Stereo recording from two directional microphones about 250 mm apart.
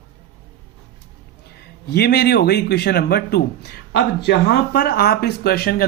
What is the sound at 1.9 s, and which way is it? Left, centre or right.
A man's voice, left.